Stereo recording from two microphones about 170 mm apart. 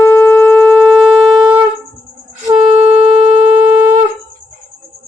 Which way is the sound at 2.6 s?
35° right (ahead or behind).